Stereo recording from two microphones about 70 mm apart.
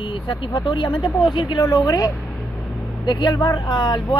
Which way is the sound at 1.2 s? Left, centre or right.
Left.